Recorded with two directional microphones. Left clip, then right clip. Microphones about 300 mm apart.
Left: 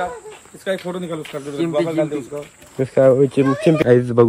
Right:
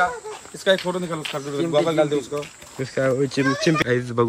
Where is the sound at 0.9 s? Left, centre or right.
Centre.